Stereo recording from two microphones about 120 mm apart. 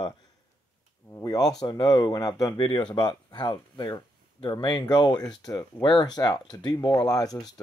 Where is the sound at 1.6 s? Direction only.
35° left (ahead or behind).